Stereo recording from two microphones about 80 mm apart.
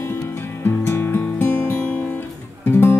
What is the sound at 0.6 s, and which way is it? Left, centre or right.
Music, left.